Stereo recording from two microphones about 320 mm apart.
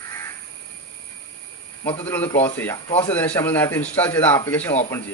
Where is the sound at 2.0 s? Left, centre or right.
Centre.